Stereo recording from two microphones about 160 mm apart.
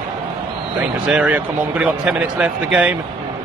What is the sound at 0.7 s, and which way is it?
Speech, 10° right (ahead or behind).